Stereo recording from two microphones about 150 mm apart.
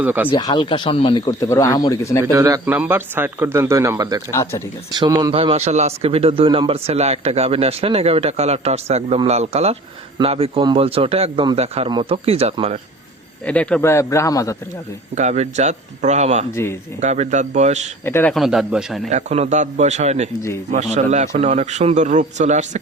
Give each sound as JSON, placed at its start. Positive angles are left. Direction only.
{"t": 0.0, "sound": "speech", "side_deg": -10}
{"t": 0.3, "sound": "speech", "side_deg": 30}
{"t": 2.3, "sound": "speech", "side_deg": -20}
{"t": 4.3, "sound": "speech", "side_deg": 20}
{"t": 4.9, "sound": "speech", "side_deg": -25}
{"t": 5.3, "sound": "a man's voice", "side_deg": -40}
{"t": 11.9, "sound": "speech", "side_deg": -30}
{"t": 12.1, "sound": "speech", "side_deg": -40}
{"t": 13.4, "sound": "speech", "side_deg": 10}
{"t": 15.1, "sound": "speech", "side_deg": -50}
{"t": 18.0, "sound": "speech", "side_deg": 15}
{"t": 18.3, "sound": "a man's voice", "side_deg": 0}
{"t": 19.1, "sound": "speech", "side_deg": -50}